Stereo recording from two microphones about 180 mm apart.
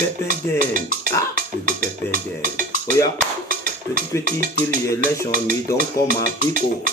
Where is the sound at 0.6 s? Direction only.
50° right (ahead or behind).